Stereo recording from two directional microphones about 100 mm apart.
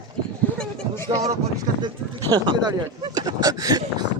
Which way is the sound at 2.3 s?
45° right (ahead or behind).